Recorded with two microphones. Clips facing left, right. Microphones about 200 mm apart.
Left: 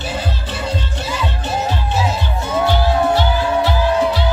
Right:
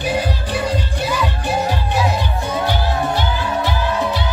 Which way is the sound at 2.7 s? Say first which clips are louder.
Left 4 dB; 15° right (ahead or behind).